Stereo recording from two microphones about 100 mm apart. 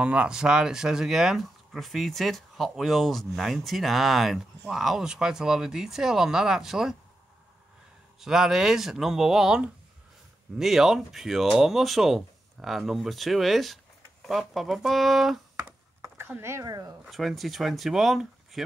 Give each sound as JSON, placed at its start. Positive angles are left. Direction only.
{"t": 0.0, "sound": "speech", "side_deg": -10}
{"t": 8.2, "sound": "speech", "side_deg": -5}
{"t": 16.0, "sound": "a sound", "side_deg": -25}
{"t": 16.6, "sound": "speech", "side_deg": -40}
{"t": 17.0, "sound": "speech", "side_deg": 0}